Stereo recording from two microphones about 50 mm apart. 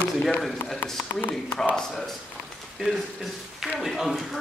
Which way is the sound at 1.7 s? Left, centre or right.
Centre.